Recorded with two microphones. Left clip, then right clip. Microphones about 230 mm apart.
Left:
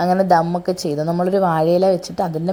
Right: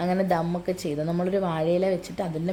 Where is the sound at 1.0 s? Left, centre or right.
Centre.